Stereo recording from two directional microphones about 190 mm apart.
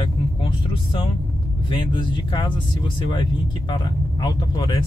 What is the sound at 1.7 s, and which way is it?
Speech, 25° left (ahead or behind).